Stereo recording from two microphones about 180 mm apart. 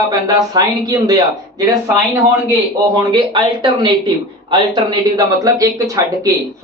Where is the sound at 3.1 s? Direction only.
25° right (ahead or behind).